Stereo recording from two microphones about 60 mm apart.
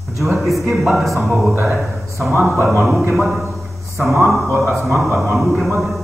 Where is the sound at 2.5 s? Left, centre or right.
Right.